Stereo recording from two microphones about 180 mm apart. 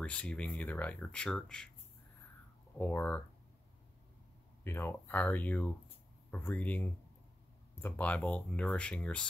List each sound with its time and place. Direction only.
0.0 s speech: 5° left (ahead or behind)
2.8 s speech: 10° left (ahead or behind)
4.6 s speech: 10° left (ahead or behind)